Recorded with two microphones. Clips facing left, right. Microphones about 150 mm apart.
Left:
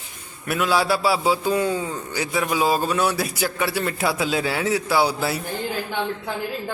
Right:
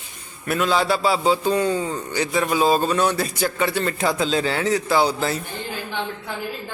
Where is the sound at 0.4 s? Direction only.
5° left (ahead or behind).